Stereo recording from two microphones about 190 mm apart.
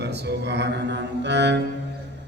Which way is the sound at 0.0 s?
60° right (ahead or behind).